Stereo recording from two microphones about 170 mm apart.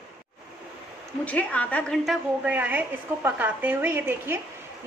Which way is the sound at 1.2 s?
10° left (ahead or behind).